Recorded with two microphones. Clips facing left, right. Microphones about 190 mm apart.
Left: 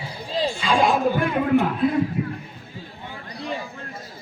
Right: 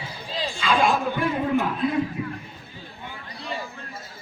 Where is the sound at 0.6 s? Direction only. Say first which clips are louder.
Even; 30° left (ahead or behind).